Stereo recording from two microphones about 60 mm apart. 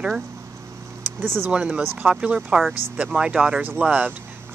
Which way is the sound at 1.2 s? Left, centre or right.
Right.